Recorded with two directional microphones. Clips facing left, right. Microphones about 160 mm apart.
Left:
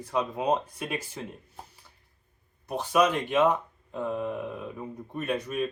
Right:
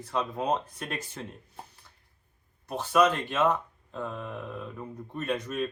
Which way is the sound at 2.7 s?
10° left (ahead or behind).